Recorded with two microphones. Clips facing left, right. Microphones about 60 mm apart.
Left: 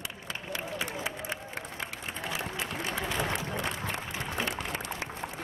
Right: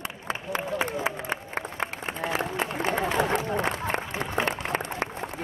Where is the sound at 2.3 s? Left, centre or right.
Right.